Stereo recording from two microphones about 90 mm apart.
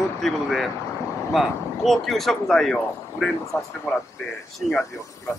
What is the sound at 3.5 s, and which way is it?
Speech, 30° left (ahead or behind).